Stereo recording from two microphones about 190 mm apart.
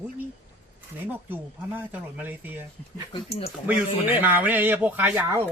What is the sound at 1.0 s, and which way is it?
Speech, 10° right (ahead or behind).